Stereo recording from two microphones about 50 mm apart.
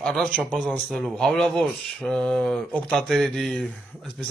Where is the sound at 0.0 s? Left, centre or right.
Centre.